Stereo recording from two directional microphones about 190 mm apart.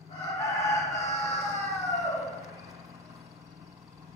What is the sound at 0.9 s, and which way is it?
Crowing, 15° left (ahead or behind).